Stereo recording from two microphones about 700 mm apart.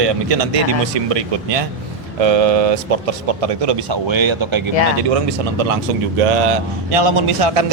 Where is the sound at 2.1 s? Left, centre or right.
Right.